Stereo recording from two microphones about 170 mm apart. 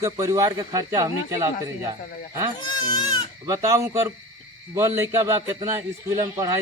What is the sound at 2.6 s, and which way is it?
Speech, 25° left (ahead or behind).